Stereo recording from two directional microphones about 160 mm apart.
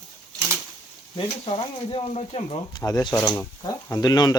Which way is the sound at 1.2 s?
35° left (ahead or behind).